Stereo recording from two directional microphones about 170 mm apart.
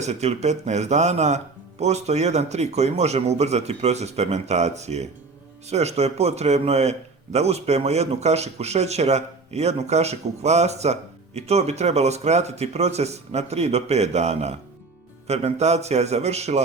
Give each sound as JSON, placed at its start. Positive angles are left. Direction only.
{"t": 0.0, "sound": "a man's voice", "side_deg": -40}